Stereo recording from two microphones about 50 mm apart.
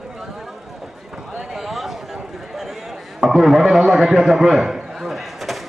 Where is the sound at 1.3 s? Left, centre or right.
Right.